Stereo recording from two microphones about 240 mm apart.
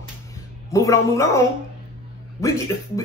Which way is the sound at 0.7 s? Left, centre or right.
Centre.